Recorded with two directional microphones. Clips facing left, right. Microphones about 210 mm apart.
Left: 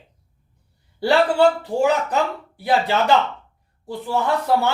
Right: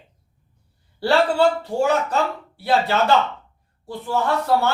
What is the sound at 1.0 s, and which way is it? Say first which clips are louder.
Speech: left 1 dB; 15° left (ahead or behind).